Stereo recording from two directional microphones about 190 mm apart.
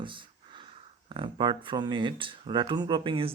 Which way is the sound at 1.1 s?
25° right (ahead or behind).